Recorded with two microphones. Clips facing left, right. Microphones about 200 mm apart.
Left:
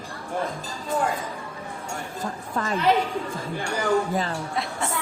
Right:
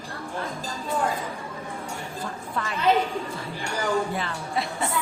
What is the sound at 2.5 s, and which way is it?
Speech, 45° left (ahead or behind).